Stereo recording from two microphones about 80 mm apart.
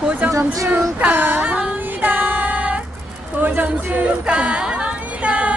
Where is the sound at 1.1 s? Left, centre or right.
Right.